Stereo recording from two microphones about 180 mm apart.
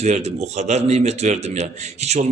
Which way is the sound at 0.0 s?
35° right (ahead or behind).